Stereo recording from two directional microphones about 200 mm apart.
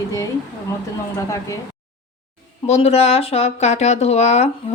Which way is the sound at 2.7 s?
30° left (ahead or behind).